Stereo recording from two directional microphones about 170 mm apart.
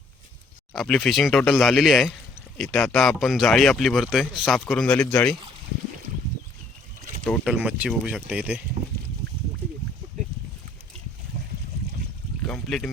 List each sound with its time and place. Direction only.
0.7 s speech: 5° left (ahead or behind)
7.3 s speech: 5° right (ahead or behind)
12.5 s a sound: 5° left (ahead or behind)